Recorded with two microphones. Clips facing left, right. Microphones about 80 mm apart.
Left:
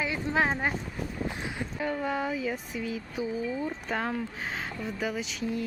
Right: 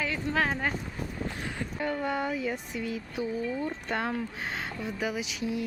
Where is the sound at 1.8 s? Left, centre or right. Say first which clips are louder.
Even; centre.